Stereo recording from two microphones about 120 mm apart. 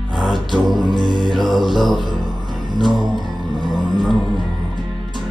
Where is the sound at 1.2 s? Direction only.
Centre (ahead or behind).